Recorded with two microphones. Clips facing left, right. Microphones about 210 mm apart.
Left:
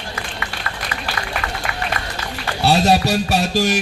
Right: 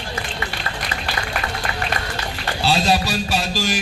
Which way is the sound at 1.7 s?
30° right (ahead or behind).